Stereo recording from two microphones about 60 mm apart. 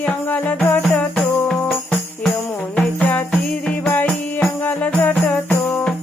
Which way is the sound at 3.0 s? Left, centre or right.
Left.